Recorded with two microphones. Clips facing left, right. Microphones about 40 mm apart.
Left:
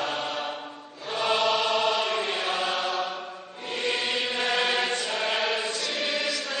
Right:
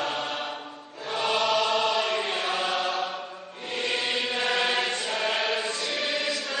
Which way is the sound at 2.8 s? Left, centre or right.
Centre.